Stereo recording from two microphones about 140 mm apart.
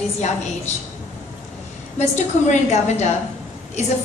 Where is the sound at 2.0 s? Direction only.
55° left (ahead or behind).